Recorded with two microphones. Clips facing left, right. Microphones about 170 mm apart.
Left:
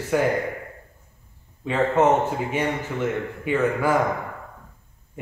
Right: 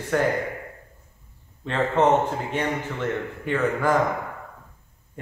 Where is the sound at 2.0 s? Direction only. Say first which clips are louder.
Even; 10° left (ahead or behind).